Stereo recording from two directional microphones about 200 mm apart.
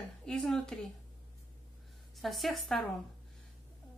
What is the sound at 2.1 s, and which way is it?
Speech, centre (ahead or behind).